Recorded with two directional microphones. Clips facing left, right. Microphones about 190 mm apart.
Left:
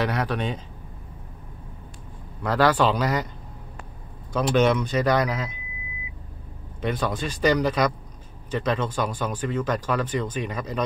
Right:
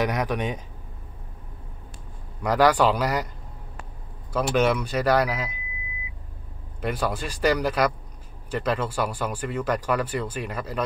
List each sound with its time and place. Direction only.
0.0 s speech: 15° right (ahead or behind)
2.4 s speech: 10° right (ahead or behind)
4.3 s speech: 5° right (ahead or behind)
6.8 s speech: 5° right (ahead or behind)